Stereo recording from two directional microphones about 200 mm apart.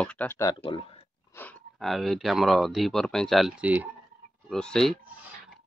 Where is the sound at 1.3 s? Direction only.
10° left (ahead or behind); by 3.9 s 10° right (ahead or behind).